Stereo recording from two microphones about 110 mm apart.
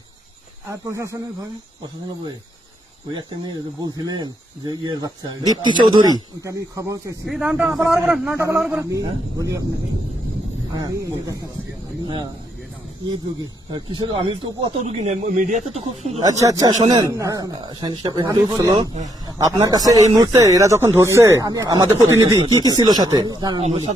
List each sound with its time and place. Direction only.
0.7 s speech: 25° right (ahead or behind)
3.1 s speech: 40° right (ahead or behind)
7.3 s a man's voice: 5° right (ahead or behind)
8.7 s speech: 25° right (ahead or behind)
10.8 s speech: 35° right (ahead or behind)
13.7 s speech: 50° right (ahead or behind)
14.8 s speech: 75° right (ahead or behind)
16.2 s speech: 30° right (ahead or behind)
16.8 s speech: 45° right (ahead or behind)
17.1 s speech: 30° right (ahead or behind); by 18.3 s 45° right (ahead or behind)
18.3 s speech: 30° right (ahead or behind)
23.6 s speech: 75° right (ahead or behind)